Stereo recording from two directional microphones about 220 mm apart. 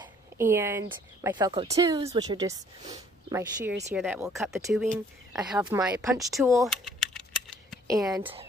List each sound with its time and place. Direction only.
0.0 s speech: 10° right (ahead or behind)
1.5 s speech: 25° right (ahead or behind)
6.8 s typing: centre (ahead or behind)
8.0 s speech: centre (ahead or behind)